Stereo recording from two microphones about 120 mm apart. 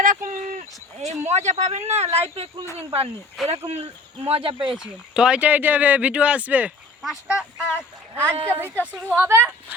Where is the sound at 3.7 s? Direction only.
65° right (ahead or behind).